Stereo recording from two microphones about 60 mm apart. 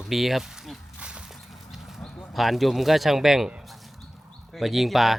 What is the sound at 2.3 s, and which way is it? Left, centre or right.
Speech, centre.